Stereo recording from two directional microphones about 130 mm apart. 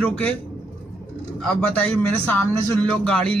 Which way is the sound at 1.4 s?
10° left (ahead or behind).